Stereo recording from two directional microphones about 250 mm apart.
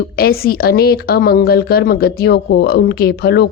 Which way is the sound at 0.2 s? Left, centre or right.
Left.